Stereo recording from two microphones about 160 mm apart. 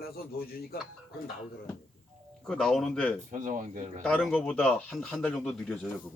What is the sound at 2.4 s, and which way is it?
Speech, centre (ahead or behind).